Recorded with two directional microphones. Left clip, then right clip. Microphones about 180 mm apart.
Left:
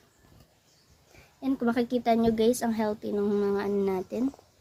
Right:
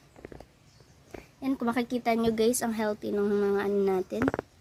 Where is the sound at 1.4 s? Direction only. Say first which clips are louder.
Left 2 dB; 50° right (ahead or behind).